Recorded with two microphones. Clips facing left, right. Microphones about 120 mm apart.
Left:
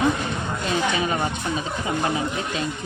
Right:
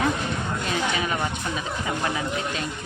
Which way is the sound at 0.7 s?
25° left (ahead or behind).